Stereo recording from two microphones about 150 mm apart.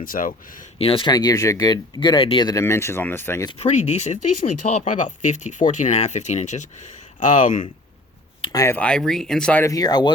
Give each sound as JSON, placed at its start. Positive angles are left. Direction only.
{"t": 0.0, "sound": "speech", "side_deg": 65}
{"t": 0.8, "sound": "speech", "side_deg": 40}
{"t": 1.1, "sound": "speech", "side_deg": 25}
{"t": 3.6, "sound": "speech", "side_deg": 50}
{"t": 8.5, "sound": "speech", "side_deg": 15}
{"t": 9.6, "sound": "speech", "side_deg": 25}